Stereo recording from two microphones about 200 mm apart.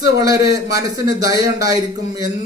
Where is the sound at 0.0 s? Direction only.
20° right (ahead or behind).